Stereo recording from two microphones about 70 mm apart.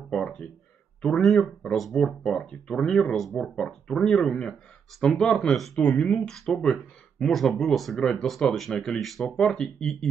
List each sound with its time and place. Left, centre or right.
0.1 s speech: centre